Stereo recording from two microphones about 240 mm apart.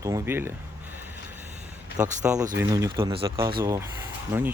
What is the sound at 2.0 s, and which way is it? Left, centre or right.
Speech, centre.